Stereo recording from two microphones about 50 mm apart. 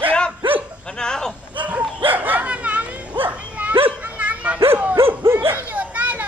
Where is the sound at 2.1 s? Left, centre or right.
Right.